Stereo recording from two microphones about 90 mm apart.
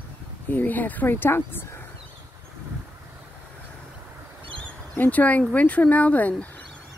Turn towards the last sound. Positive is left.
turn(degrees=15)  # may be behind; listen again after turning